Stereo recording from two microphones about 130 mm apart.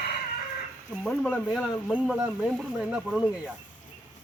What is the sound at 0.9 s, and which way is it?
Speech, 5° right (ahead or behind).